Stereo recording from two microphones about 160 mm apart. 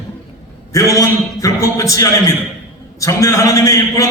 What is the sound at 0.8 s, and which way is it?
A man's voice, 20° left (ahead or behind).